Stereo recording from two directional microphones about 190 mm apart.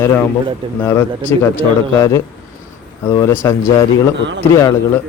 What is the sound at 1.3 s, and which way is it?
A man's voice, 15° left (ahead or behind).